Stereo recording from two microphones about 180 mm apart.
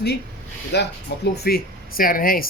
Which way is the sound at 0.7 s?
70° left (ahead or behind).